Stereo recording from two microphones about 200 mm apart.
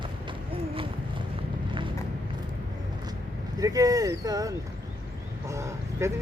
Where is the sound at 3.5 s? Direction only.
20° right (ahead or behind).